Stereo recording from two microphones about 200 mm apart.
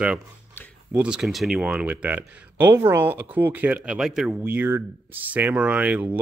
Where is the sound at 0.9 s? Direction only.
5° right (ahead or behind).